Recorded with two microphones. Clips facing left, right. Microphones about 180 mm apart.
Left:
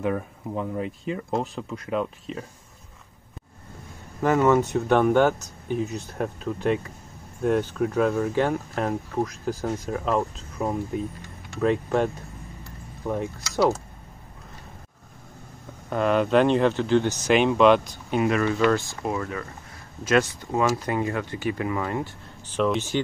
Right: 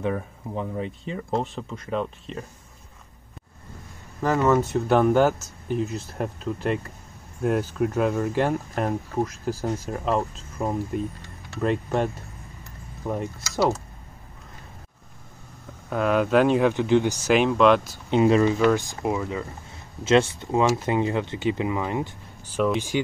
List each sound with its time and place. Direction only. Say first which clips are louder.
0.0 s speech: left 1 dB; 5° left (ahead or behind)
4.2 s speech: left 1 dB; centre (ahead or behind)
15.9 s speech: even; 5° right (ahead or behind)
17.3 s speech: left 1 dB; centre (ahead or behind)
18.1 s speech: right 4 dB; 30° right (ahead or behind)
18.4 s speech: right 2 dB; 15° right (ahead or behind)